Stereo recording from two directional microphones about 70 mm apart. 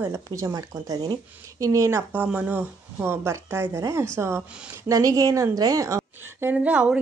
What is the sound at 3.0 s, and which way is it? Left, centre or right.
Speech, right.